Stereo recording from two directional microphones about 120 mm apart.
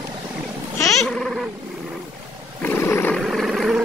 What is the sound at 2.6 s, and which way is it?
Roar, 15° left (ahead or behind).